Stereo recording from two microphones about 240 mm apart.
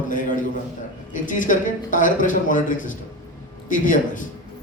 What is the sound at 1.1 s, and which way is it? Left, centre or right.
A man's voice, left.